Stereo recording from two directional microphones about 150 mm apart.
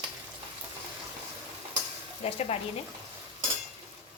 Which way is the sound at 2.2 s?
40° left (ahead or behind).